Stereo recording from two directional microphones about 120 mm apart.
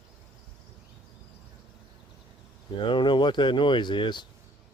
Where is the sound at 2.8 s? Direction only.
40° left (ahead or behind).